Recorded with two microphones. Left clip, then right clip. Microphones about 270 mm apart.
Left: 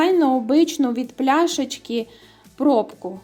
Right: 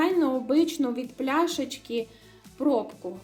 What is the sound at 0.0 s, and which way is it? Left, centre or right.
A woman's voice, left.